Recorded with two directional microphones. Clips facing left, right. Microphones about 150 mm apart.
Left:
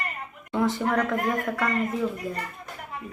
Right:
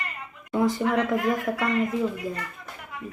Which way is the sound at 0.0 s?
45° left (ahead or behind).